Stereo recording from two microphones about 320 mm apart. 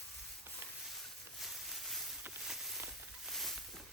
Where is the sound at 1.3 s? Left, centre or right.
Centre.